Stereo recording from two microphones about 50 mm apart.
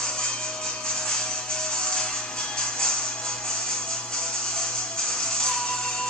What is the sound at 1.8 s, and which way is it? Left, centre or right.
Music, centre.